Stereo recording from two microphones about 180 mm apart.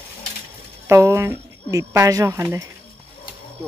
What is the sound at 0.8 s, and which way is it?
Speech, 15° right (ahead or behind).